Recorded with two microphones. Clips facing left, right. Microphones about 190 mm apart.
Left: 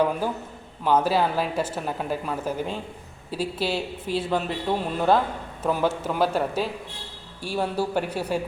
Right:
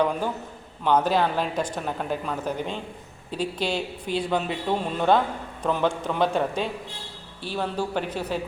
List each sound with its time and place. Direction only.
0.0 s speech: 5° left (ahead or behind)